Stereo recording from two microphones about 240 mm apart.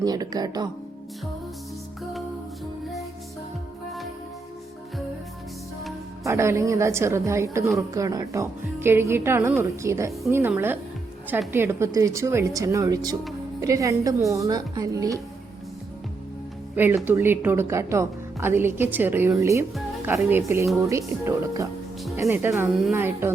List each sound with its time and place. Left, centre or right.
0.0 s a woman's voice: centre
6.2 s a woman's voice: centre
16.7 s a woman's voice: centre